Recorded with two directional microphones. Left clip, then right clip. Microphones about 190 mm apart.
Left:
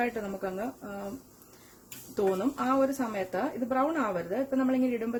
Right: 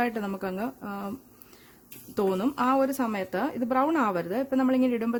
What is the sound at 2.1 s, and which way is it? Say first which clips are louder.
Speech: right 2 dB; 55° right (ahead or behind).